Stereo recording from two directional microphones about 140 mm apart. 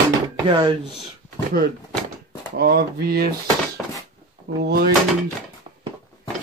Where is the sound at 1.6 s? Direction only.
90° right.